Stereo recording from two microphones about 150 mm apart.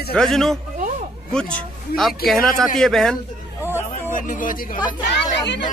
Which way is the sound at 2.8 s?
Centre (ahead or behind).